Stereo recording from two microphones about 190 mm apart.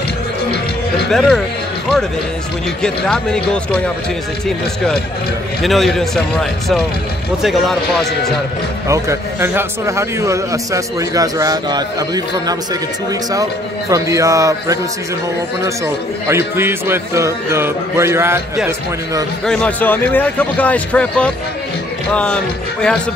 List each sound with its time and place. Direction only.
1.1 s speech: centre (ahead or behind)
2.8 s speech: 5° left (ahead or behind)
5.6 s speech: centre (ahead or behind)
7.4 s speech: centre (ahead or behind)
8.8 s a man's voice: 15° right (ahead or behind)
16.3 s a man's voice: 15° right (ahead or behind)
19.4 s a man's voice: 5° left (ahead or behind)